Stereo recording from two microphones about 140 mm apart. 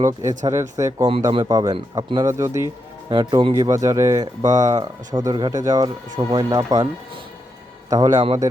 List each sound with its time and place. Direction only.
0.0 s speech: 20° right (ahead or behind)
3.1 s a man's voice: 30° right (ahead or behind)
7.9 s speech: 25° right (ahead or behind)